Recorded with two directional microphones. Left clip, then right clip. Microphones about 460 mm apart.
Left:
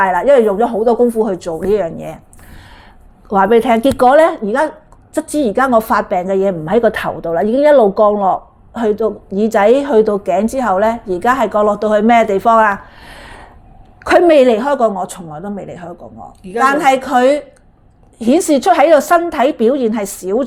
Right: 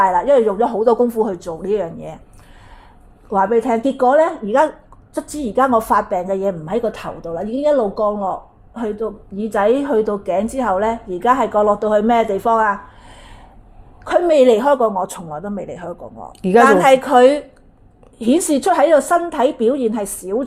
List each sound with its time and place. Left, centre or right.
0.0 s a woman's voice: centre
3.2 s a woman's voice: centre
14.3 s a woman's voice: centre